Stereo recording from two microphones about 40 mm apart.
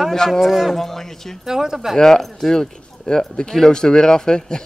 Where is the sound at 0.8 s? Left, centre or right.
Centre.